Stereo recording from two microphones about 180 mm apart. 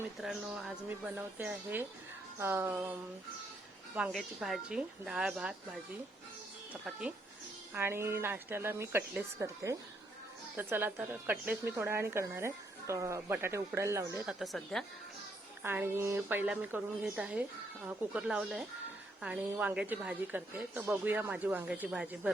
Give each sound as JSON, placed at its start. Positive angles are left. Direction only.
{"t": 0.2, "sound": "speech", "side_deg": 0}
{"t": 3.9, "sound": "a woman's voice", "side_deg": -5}
{"t": 7.7, "sound": "speech", "side_deg": -15}
{"t": 14.3, "sound": "a woman's voice", "side_deg": 0}
{"t": 15.6, "sound": "speech", "side_deg": -10}